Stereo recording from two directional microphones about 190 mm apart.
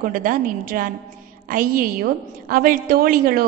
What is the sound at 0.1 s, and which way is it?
A woman's voice, 45° right (ahead or behind).